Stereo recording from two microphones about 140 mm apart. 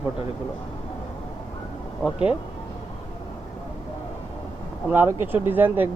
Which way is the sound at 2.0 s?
5° right (ahead or behind).